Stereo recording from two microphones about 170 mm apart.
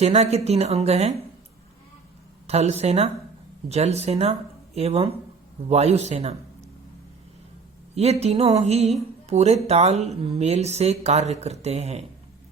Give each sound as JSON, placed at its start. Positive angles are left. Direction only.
{"t": 0.0, "sound": "speech", "side_deg": -40}
{"t": 2.5, "sound": "a man's voice", "side_deg": -40}
{"t": 7.9, "sound": "speech", "side_deg": -40}